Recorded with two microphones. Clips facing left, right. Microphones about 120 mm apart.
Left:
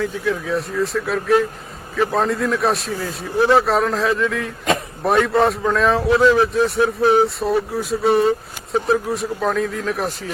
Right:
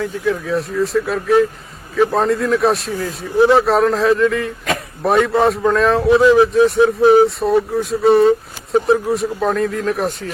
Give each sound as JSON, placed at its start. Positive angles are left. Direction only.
{"t": 0.0, "sound": "speech", "side_deg": 0}
{"t": 6.7, "sound": "speech", "side_deg": -20}
{"t": 7.1, "sound": "speech", "side_deg": 0}